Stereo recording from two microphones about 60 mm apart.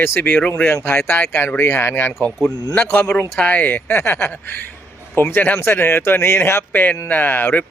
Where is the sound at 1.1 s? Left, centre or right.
Left.